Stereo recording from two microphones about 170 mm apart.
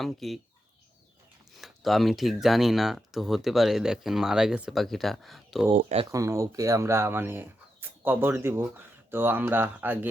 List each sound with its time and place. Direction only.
0.0 s speech: centre (ahead or behind)
1.5 s speech: centre (ahead or behind)
5.7 s speech: 40° right (ahead or behind)
6.1 s speech: 20° right (ahead or behind)